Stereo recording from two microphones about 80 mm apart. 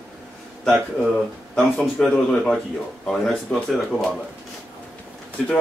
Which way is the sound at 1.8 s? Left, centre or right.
Centre.